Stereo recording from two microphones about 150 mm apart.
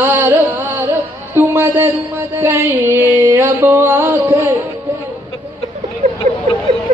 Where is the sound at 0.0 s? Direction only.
15° right (ahead or behind).